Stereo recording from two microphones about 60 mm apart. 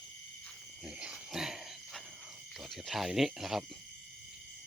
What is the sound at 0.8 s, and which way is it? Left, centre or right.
Cricket, centre.